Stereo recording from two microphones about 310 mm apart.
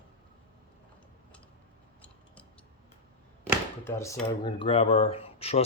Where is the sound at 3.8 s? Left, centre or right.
Centre.